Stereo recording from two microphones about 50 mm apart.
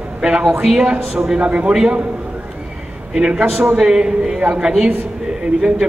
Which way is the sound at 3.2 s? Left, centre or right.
Centre.